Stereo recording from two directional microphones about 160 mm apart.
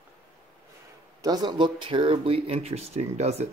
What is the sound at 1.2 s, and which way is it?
Speech, 25° right (ahead or behind).